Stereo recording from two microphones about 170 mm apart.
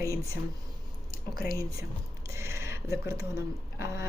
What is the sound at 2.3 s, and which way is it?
Speech, 15° right (ahead or behind).